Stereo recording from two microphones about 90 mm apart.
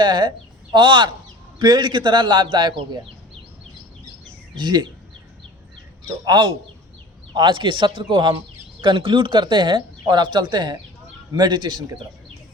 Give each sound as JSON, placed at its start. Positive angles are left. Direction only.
{"t": 0.0, "sound": "speech", "side_deg": -55}
{"t": 4.5, "sound": "speech", "side_deg": -50}
{"t": 6.2, "sound": "speech", "side_deg": -55}